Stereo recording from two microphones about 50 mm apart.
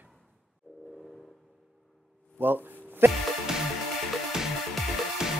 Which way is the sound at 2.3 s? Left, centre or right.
Right.